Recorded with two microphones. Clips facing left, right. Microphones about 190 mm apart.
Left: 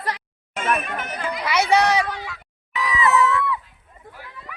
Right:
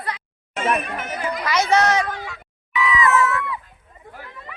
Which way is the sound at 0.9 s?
5° right (ahead or behind).